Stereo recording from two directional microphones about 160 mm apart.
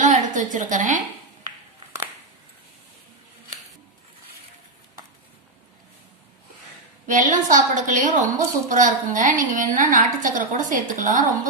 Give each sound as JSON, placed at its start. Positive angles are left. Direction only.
{"t": 0.0, "sound": "a woman's voice", "side_deg": -50}
{"t": 7.1, "sound": "a woman's voice", "side_deg": -50}